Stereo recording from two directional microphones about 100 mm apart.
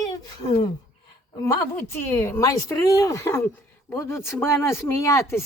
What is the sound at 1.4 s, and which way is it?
A woman's voice, 25° left (ahead or behind).